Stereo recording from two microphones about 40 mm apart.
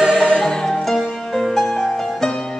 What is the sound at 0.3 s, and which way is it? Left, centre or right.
Music, centre.